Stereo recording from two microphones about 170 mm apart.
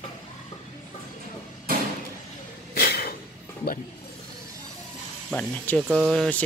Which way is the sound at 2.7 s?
65° left (ahead or behind).